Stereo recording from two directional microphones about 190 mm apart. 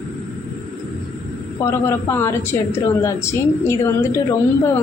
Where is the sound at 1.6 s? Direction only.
15° left (ahead or behind).